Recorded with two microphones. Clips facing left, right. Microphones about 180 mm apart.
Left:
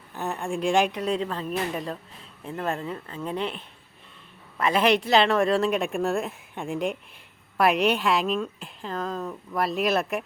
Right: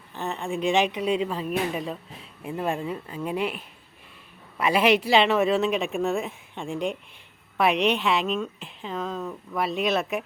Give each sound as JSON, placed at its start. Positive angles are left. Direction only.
{"t": 0.1, "sound": "a woman's voice", "side_deg": 5}